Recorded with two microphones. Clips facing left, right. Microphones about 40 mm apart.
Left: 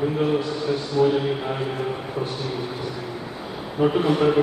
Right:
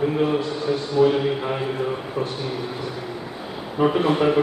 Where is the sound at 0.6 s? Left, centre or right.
Right.